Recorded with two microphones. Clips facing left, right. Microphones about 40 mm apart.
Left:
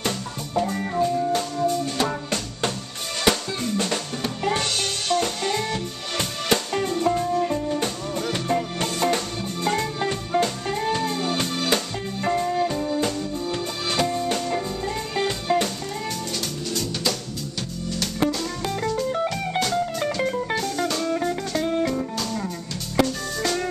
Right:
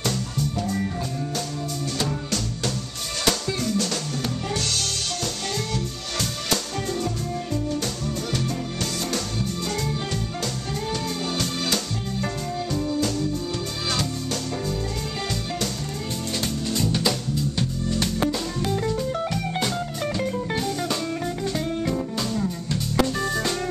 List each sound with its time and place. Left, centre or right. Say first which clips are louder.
0.6 s music: left 9 dB; centre
3.3 s drum: left 2 dB; left
4.6 s music: left 2 dB; left
9.7 s music: left 4 dB; left
16.7 s music: right 2 dB; centre
18.2 s music: left 1 dB; centre
20.2 s music: even; left